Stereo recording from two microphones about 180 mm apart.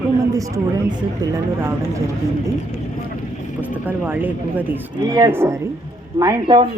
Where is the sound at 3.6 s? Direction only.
10° right (ahead or behind).